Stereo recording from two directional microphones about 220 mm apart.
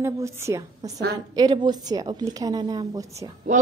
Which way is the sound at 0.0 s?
15° right (ahead or behind).